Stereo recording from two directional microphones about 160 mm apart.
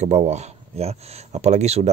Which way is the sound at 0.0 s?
45° right (ahead or behind).